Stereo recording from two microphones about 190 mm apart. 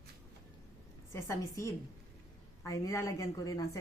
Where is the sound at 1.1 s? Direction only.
15° left (ahead or behind).